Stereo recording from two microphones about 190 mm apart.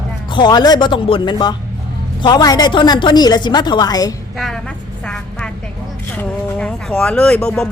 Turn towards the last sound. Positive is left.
turn(degrees=5)  # may be behind; listen again after turning